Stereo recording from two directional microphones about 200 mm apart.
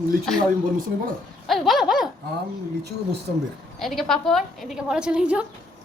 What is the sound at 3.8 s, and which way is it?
A woman's voice, centre (ahead or behind).